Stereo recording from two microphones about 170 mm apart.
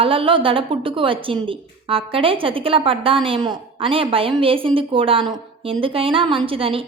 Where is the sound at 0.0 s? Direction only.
30° right (ahead or behind).